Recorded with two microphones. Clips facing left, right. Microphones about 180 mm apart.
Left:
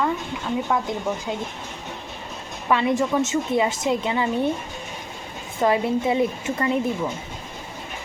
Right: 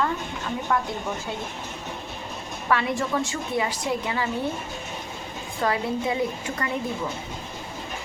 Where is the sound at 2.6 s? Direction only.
20° left (ahead or behind).